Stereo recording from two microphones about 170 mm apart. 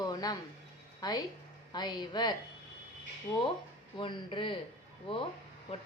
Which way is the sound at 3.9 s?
30° left (ahead or behind).